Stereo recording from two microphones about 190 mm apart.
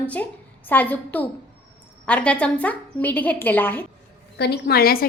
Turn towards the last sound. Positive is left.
turn(degrees=50)  # may be behind; listen again after turning